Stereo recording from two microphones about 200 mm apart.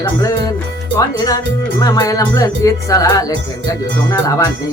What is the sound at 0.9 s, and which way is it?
Music, 20° left (ahead or behind).